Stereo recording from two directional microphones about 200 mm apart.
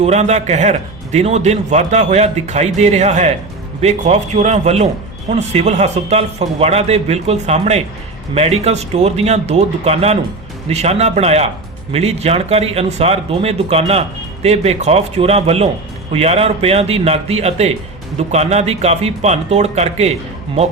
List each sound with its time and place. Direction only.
0.0 s a man's voice: 35° right (ahead or behind)